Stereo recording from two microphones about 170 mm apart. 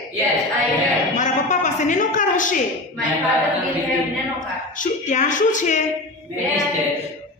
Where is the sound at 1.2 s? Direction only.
45° left (ahead or behind).